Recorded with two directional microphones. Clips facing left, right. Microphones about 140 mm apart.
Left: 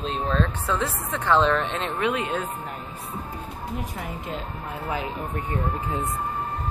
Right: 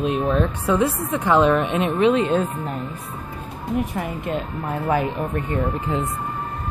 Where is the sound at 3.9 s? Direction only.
70° right (ahead or behind).